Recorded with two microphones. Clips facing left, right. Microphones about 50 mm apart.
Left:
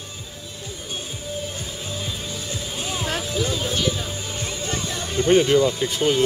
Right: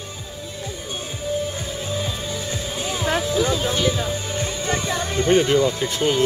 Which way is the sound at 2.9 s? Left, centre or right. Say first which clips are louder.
Right 5 dB; right.